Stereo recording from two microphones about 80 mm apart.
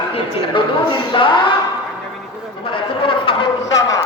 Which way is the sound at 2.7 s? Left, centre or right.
Left.